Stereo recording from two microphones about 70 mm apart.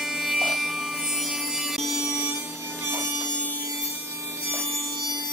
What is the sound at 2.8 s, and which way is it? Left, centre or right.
Wood, right.